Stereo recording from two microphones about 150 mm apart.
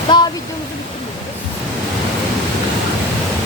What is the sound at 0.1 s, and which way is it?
Speech, 30° left (ahead or behind).